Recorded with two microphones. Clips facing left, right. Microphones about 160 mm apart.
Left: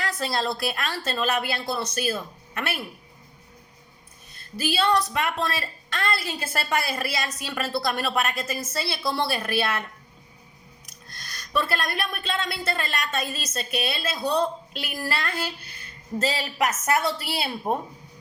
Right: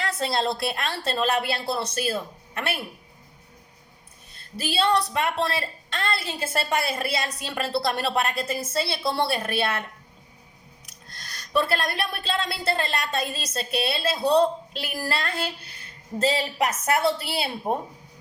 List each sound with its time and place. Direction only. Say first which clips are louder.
0.0 s a woman's voice: right 2 dB; 25° right (ahead or behind)
4.4 s a woman's voice: even; 25° right (ahead or behind)
11.1 s a woman's voice: right 2 dB; 30° right (ahead or behind)